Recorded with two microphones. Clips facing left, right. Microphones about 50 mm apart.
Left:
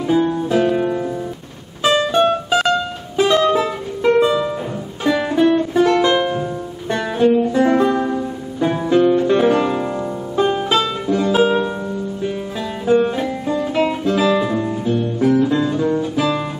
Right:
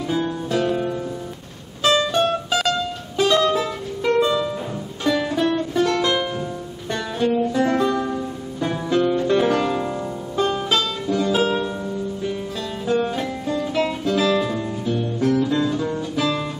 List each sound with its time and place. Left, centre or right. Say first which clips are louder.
0.0 s music: left 7 dB; centre
12.8 s music: left 6 dB; centre